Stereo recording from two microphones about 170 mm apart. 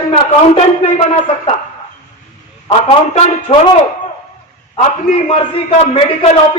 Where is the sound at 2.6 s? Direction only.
35° left (ahead or behind).